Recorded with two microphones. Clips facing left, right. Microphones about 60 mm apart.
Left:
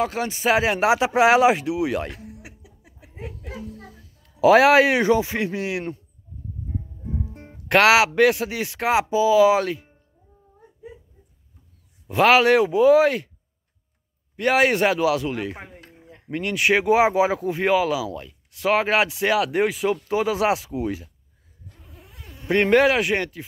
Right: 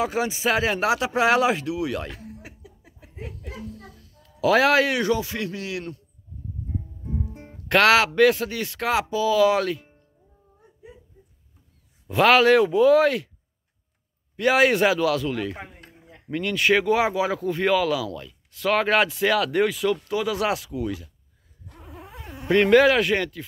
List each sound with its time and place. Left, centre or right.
0.0 s speech: centre
0.5 s speech: centre
2.0 s a sound: centre
4.4 s speech: centre
7.3 s speech: centre
12.1 s speech: centre
14.3 s speech: centre; by 21.1 s left
21.8 s insect: right
22.5 s speech: centre